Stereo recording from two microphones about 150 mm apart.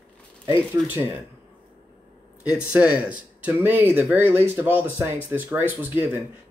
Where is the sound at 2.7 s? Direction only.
10° right (ahead or behind).